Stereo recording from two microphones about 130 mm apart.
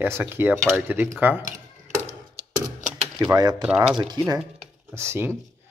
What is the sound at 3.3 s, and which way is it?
Speech, 30° right (ahead or behind).